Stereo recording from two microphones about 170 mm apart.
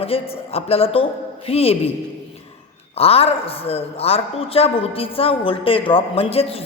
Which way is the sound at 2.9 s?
35° left (ahead or behind).